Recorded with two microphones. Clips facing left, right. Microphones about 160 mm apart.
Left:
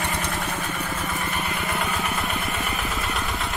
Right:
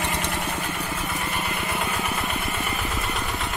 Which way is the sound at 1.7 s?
5° right (ahead or behind).